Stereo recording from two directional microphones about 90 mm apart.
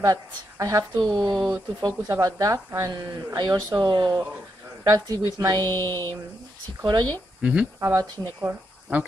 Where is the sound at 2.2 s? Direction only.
45° right (ahead or behind).